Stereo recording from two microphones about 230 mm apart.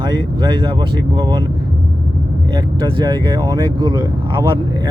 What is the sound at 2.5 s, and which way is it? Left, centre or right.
Speech, right.